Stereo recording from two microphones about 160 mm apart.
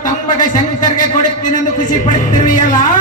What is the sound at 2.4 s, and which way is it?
Speech, 55° left (ahead or behind).